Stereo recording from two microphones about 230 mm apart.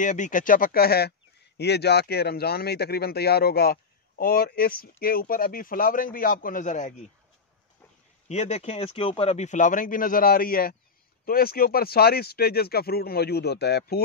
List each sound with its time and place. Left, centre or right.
0.0 s speech: left
8.3 s speech: left